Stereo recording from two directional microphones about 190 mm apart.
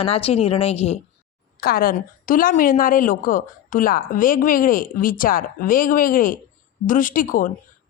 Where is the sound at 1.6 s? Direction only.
50° left (ahead or behind).